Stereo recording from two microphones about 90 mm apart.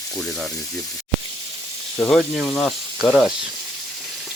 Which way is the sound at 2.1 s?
5° left (ahead or behind).